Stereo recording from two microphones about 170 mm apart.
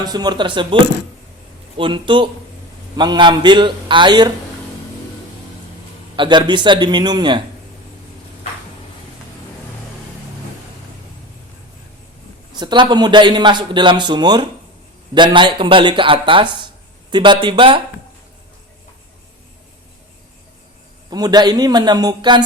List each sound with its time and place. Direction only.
0.0 s a man's voice: 25° right (ahead or behind)
1.8 s a man's voice: 30° right (ahead or behind)
6.1 s a man's voice: 25° right (ahead or behind)
12.5 s a man's voice: 25° right (ahead or behind)
21.1 s a man's voice: 25° right (ahead or behind)